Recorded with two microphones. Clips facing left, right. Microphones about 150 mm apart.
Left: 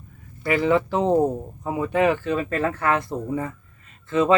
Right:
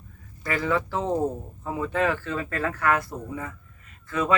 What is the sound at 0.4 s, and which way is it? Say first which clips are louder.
Speech: left 6 dB; 20° left (ahead or behind).